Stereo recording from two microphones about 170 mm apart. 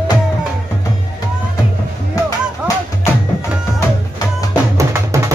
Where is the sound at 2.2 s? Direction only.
20° left (ahead or behind).